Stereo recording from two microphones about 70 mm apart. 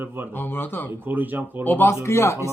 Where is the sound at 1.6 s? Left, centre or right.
Left.